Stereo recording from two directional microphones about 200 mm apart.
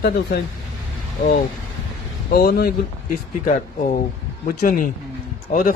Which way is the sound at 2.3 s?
50° left (ahead or behind).